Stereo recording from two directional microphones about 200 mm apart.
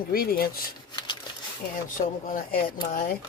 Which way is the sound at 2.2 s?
45° left (ahead or behind).